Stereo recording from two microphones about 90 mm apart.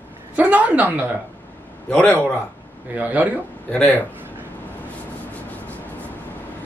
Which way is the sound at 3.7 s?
15° left (ahead or behind).